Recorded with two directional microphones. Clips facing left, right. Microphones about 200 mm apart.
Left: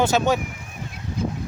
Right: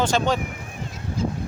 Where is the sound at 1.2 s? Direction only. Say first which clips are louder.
Right 1 dB; 60° left (ahead or behind).